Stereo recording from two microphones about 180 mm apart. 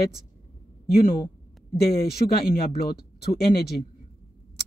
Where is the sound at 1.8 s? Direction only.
60° left (ahead or behind).